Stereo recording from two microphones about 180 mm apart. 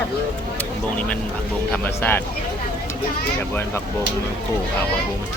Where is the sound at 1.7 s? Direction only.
10° left (ahead or behind).